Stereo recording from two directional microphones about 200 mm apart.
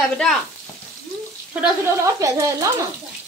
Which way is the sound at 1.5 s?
15° right (ahead or behind).